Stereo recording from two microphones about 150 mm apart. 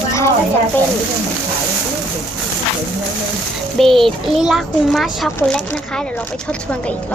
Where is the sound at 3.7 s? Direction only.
Centre (ahead or behind).